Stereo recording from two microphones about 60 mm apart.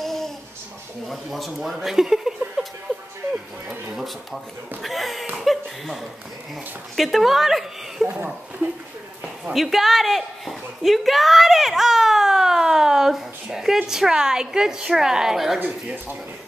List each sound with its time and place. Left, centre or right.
0.0 s babbling: centre
1.0 s speech: centre
3.9 s speech: centre
7.0 s speech: centre
9.5 s a sound: centre
13.8 s a woman's voice: centre
15.6 s speech: right